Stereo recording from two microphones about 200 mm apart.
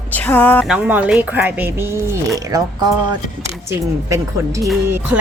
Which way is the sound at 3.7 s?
15° right (ahead or behind).